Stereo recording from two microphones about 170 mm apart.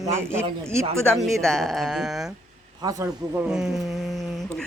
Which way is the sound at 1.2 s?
Centre (ahead or behind).